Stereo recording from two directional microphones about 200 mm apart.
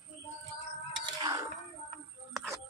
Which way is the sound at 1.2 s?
20° right (ahead or behind).